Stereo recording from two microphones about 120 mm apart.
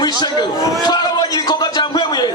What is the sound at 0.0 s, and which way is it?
Speech, 35° left (ahead or behind).